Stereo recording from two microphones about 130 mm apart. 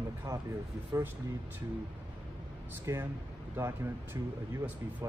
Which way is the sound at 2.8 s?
20° right (ahead or behind).